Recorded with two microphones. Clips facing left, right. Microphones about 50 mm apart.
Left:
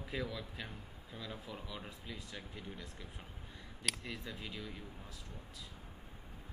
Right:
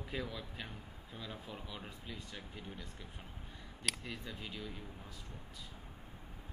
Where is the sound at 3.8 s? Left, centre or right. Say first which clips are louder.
Even; centre.